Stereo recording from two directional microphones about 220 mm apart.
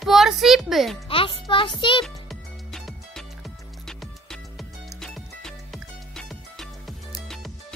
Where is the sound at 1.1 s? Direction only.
25° left (ahead or behind).